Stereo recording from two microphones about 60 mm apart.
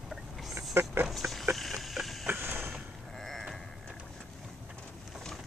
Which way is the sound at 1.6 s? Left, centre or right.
Centre.